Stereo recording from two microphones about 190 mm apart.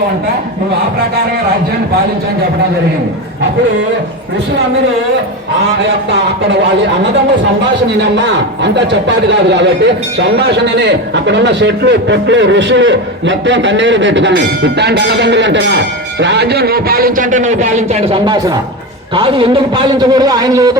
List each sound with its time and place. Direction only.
8.1 s a man's voice: 65° right (ahead or behind); by 20.7 s 20° right (ahead or behind)